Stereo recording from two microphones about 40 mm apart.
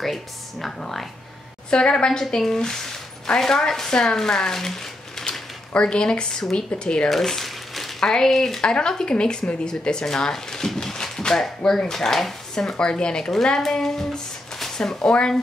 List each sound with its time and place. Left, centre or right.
0.0 s speech: centre
1.7 s a woman's voice: left
5.8 s a woman's voice: left
7.1 s crumpling: centre
8.0 s speech: centre
8.5 s a woman's voice: left
11.1 s a sound: centre
11.6 s speech: centre
12.5 s a woman's voice: centre